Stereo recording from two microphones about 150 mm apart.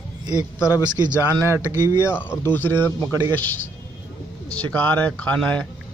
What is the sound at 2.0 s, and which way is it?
A man's voice, 15° left (ahead or behind).